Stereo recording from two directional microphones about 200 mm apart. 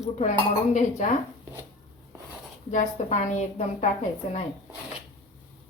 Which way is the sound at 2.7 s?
40° left (ahead or behind).